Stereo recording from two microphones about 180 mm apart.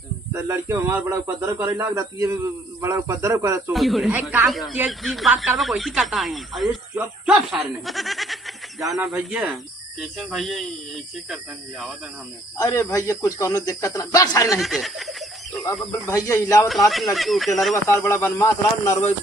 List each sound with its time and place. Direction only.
0.3 s speech: 15° right (ahead or behind)
3.7 s speech: centre (ahead or behind)
12.5 s speech: 20° left (ahead or behind)
14.6 s a sound: centre (ahead or behind)
16.0 s speech: 15° left (ahead or behind)
16.6 s speech: centre (ahead or behind)
17.8 s speech: 15° left (ahead or behind)